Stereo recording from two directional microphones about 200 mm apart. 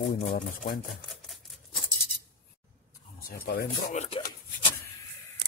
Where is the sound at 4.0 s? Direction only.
30° left (ahead or behind).